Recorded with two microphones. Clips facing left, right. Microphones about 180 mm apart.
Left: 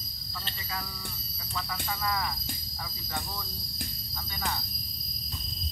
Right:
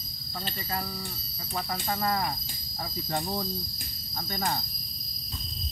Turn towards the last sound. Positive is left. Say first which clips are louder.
# right 4 dB
turn(degrees=-45)  # may be behind; listen again after turning